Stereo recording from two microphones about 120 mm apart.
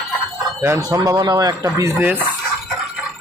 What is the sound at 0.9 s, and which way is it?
Speech, 30° right (ahead or behind).